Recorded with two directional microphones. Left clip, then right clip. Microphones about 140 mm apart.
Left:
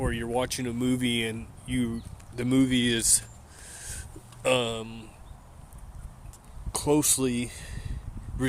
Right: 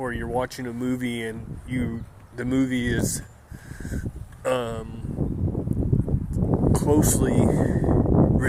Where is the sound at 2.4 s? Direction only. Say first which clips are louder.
Even; 25° left (ahead or behind).